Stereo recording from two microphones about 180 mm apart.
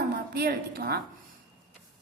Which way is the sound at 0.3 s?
60° right (ahead or behind).